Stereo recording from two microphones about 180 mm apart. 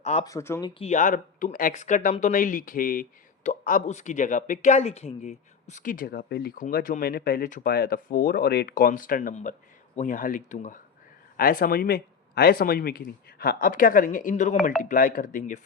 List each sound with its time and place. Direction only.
0.0 s speech: 35° left (ahead or behind)
0.3 s speech: 15° left (ahead or behind)
0.7 s speech: 35° left (ahead or behind)
11.3 s speech: 55° left (ahead or behind)